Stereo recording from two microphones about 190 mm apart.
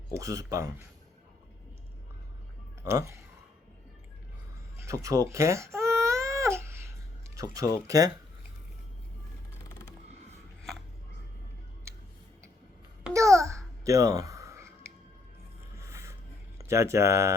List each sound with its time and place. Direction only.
0.1 s speech: 15° right (ahead or behind)
2.8 s speech: 15° right (ahead or behind)
4.8 s baby cry: 15° right (ahead or behind)
7.5 s speech: 15° right (ahead or behind)
13.1 s babbling: 15° right (ahead or behind)
15.8 s music: 15° right (ahead or behind)
16.6 s speech: 15° right (ahead or behind)